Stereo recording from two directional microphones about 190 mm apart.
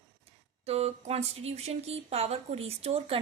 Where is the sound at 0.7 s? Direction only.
35° right (ahead or behind).